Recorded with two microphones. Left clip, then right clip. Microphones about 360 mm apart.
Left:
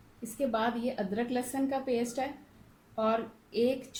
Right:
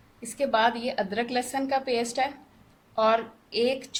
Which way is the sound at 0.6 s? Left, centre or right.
Right.